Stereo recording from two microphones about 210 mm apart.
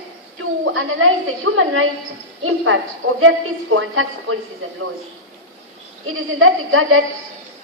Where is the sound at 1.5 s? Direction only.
65° right (ahead or behind).